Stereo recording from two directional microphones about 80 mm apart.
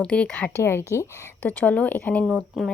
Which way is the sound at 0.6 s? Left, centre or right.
Left.